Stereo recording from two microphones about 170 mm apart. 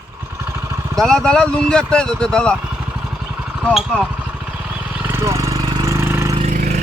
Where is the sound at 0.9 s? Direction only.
5° left (ahead or behind).